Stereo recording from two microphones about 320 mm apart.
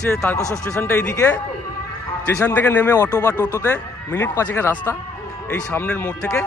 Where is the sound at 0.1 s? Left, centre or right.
Centre.